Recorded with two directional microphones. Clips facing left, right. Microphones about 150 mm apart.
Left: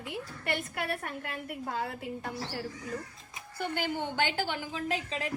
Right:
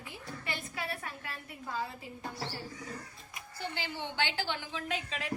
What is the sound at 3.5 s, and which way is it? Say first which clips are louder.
A woman's voice: left 7 dB; 55° left (ahead or behind).